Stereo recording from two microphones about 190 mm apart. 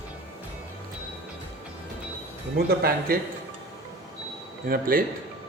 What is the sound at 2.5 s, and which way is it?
Speech, 55° right (ahead or behind).